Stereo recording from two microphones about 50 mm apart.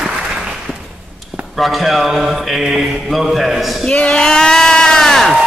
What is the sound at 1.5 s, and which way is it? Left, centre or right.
A man's voice, centre.